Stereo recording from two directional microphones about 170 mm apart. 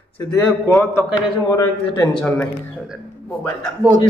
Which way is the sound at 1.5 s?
15° left (ahead or behind).